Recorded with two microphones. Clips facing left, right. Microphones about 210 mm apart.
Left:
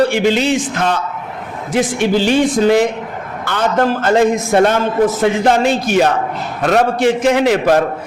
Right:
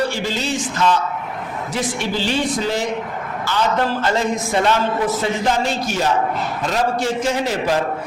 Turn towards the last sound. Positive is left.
turn(degrees=65)  # may be behind; listen again after turning